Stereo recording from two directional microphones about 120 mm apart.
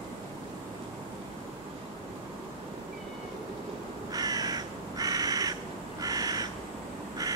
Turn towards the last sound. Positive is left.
turn(degrees=-30)  # may be behind; listen again after turning